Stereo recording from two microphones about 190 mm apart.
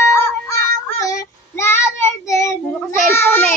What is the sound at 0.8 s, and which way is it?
Child singing, 15° left (ahead or behind).